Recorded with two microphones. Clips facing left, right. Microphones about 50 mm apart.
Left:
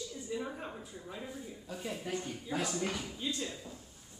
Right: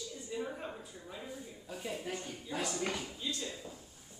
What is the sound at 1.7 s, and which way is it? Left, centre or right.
Speech, centre.